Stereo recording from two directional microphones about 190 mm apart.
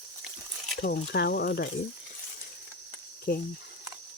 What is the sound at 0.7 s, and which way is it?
Speech, 60° left (ahead or behind).